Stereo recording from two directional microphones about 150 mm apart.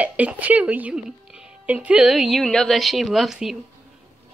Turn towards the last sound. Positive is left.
turn(degrees=0)  # may be behind; listen again after turning